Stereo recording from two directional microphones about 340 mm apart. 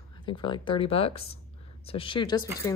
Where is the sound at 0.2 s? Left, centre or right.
Centre.